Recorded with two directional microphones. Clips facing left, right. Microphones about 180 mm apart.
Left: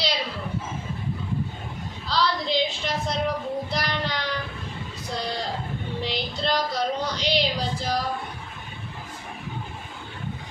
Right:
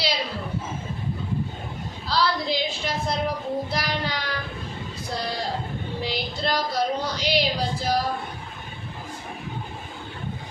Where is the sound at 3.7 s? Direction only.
5° right (ahead or behind).